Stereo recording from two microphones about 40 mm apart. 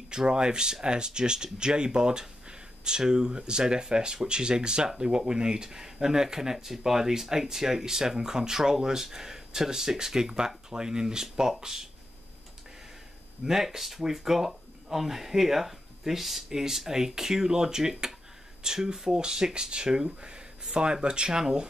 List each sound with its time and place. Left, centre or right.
0.1 s speech: centre
13.5 s speech: centre